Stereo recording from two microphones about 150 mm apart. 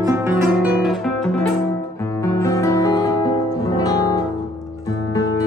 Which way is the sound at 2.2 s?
20° left (ahead or behind).